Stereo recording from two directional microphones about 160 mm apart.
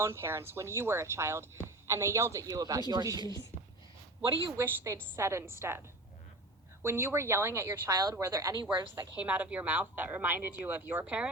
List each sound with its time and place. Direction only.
0.0 s a woman's voice: 15° right (ahead or behind)
4.6 s a woman's voice: 15° right (ahead or behind)
6.8 s a woman's voice: 15° right (ahead or behind)
8.6 s a woman's voice: 10° right (ahead or behind)